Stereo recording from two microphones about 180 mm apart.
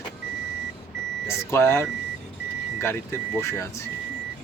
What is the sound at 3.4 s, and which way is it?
Speech, 15° left (ahead or behind).